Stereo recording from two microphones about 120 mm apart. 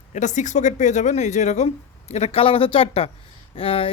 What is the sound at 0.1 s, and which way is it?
Speech, 85° left.